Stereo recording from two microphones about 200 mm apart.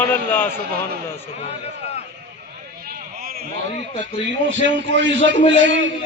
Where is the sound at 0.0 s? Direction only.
10° left (ahead or behind).